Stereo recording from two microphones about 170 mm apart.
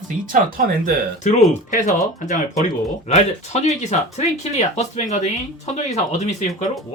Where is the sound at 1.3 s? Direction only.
45° left (ahead or behind).